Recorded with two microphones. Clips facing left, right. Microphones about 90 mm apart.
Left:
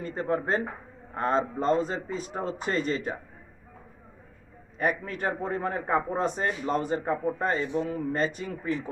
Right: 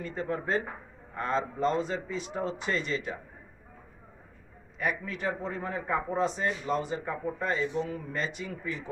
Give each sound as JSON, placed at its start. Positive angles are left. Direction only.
{"t": 0.0, "sound": "a man's voice", "side_deg": 40}
{"t": 4.7, "sound": "a man's voice", "side_deg": 45}